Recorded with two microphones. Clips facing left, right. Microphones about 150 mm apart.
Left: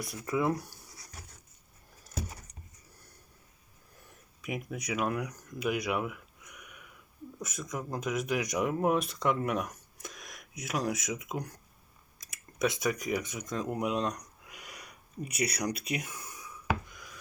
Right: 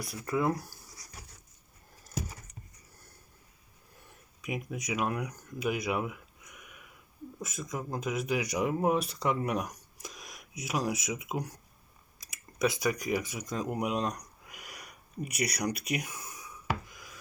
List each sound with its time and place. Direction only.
0.0 s speech: centre (ahead or behind)
4.8 s speech: centre (ahead or behind)
7.3 s speech: centre (ahead or behind)
16.9 s a sound: 5° right (ahead or behind)